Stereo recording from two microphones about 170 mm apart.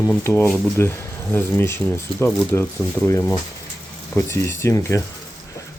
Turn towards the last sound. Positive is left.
turn(degrees=20)  # may be behind; listen again after turning